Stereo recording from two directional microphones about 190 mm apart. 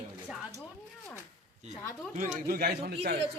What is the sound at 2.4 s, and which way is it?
Speech, 55° right (ahead or behind).